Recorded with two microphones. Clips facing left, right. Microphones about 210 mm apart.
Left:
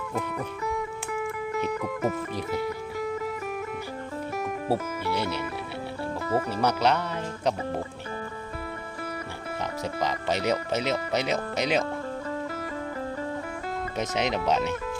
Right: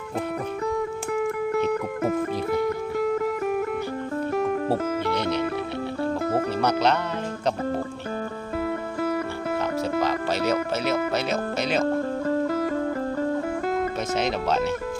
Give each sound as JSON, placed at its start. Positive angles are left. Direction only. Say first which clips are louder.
{"t": 1.7, "sound": "music", "louder": "right 4 dB", "side_deg": -55}
{"t": 4.7, "sound": "speech", "louder": "right 3 dB", "side_deg": 10}
{"t": 6.6, "sound": "speech", "louder": "right 1 dB", "side_deg": 10}
{"t": 10.0, "sound": "speech", "louder": "even", "side_deg": 15}
{"t": 12.3, "sound": "music", "louder": "right 9 dB", "side_deg": -45}
{"t": 14.2, "sound": "speech", "louder": "right 1 dB", "side_deg": 15}